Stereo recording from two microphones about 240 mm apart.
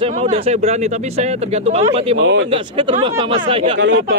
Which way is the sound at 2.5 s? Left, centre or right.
Right.